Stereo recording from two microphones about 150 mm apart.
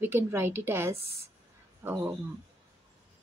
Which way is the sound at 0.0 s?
15° right (ahead or behind).